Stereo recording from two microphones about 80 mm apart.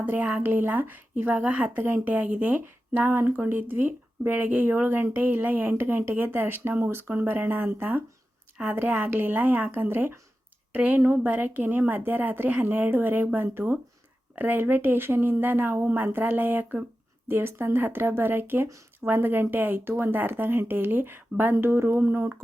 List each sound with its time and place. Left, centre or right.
0.0 s speech: centre
11.0 s speech: right